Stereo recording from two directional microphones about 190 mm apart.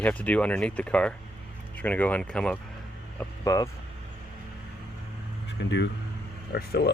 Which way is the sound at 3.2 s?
15° left (ahead or behind).